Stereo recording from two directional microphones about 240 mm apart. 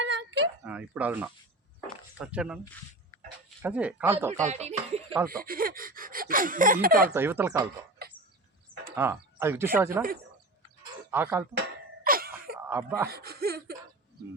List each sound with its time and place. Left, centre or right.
0.0 s a sound: right
0.6 s speech: centre
3.6 s speech: centre
4.4 s a sound: right
5.3 s speech: right
7.1 s speech: centre
8.0 s bird: right
9.0 s speech: centre
11.1 s speech: centre
12.0 s a sound: right
12.6 s speech: centre
13.1 s speech: right